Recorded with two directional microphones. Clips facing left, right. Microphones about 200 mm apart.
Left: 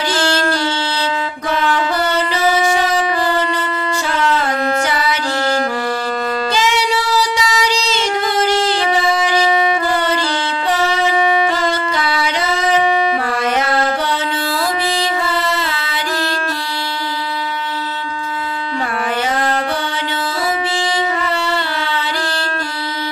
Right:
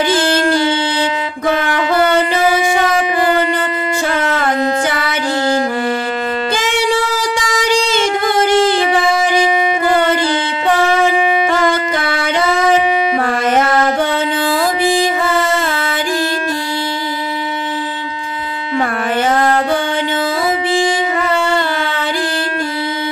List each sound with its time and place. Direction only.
1.5 s music: 55° right (ahead or behind)
4.1 s music: 55° right (ahead or behind)
6.5 s music: 50° right (ahead or behind)
10.7 s shofar: 50° right (ahead or behind)
11.5 s wind instrument: 50° right (ahead or behind)
13.2 s music: 50° right (ahead or behind)
19.3 s music: 50° right (ahead or behind)
21.5 s music: 50° right (ahead or behind)